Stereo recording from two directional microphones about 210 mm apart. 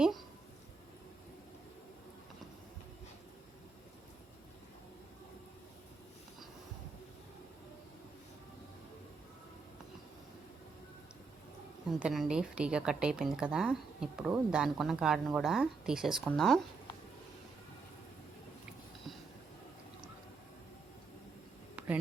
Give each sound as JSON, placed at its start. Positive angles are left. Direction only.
{"t": 11.9, "sound": "speech", "side_deg": -5}